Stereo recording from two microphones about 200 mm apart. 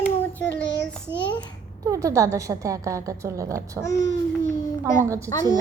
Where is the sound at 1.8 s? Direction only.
15° right (ahead or behind).